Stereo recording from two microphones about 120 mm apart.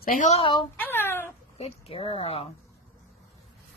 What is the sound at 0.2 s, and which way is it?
Speech, 70° left (ahead or behind).